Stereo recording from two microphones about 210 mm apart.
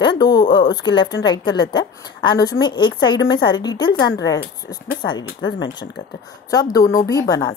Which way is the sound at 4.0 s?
55° left (ahead or behind).